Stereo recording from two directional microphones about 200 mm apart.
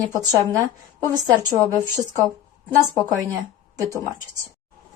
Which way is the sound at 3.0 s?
15° right (ahead or behind).